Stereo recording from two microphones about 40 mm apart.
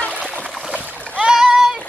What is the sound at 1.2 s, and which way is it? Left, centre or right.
Splash, centre.